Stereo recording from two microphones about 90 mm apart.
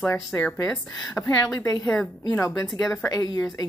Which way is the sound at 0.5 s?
15° left (ahead or behind).